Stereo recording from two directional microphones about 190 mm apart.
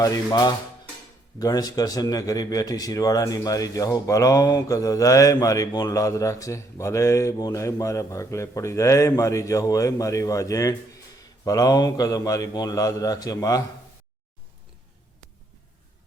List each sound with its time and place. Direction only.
0.0 s a man's voice: 20° left (ahead or behind)